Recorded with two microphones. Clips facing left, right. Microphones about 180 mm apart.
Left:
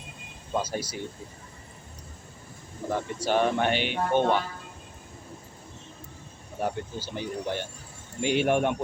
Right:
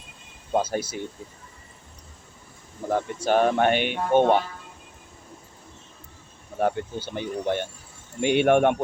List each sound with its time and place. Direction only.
0.5 s speech: 55° right (ahead or behind)
2.9 s speech: 50° right (ahead or behind)
6.6 s speech: 60° right (ahead or behind)